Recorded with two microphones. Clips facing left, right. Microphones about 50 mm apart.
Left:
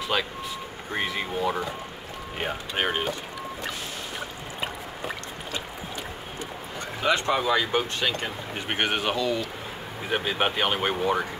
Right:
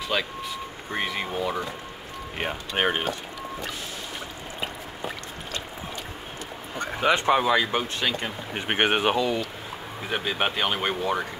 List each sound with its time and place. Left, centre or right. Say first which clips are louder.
0.9 s speech: even; centre
2.8 s speech: right 2 dB; centre
4.6 s a sound: left 1 dB; centre
7.0 s speech: right 3 dB; centre
8.5 s speech: right 4 dB; right
10.0 s speech: left 1 dB; centre